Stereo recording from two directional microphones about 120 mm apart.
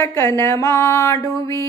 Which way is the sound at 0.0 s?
25° left (ahead or behind).